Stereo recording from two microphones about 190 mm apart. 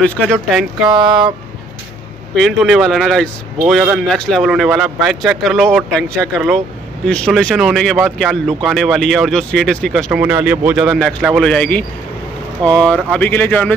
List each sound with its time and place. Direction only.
0.3 s speech: centre (ahead or behind)
0.8 s a sound: 20° right (ahead or behind)
2.3 s speech: centre (ahead or behind)
10.2 s speech: 10° right (ahead or behind); by 13.7 s 10° left (ahead or behind)